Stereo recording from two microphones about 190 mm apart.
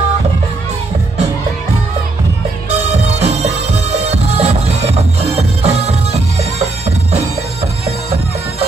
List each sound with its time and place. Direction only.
2.7 s music: 35° right (ahead or behind)